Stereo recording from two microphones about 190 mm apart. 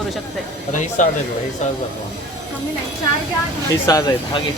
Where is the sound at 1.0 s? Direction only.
40° left (ahead or behind).